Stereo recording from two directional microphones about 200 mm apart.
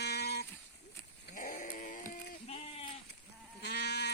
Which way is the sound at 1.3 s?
40° left (ahead or behind).